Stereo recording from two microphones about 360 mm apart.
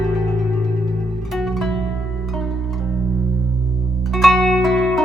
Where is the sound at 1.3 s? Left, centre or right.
Centre.